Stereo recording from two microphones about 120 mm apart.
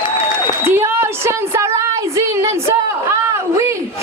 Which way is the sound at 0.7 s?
20° right (ahead or behind).